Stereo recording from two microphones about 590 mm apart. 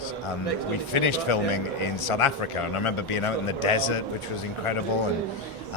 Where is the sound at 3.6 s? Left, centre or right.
Left.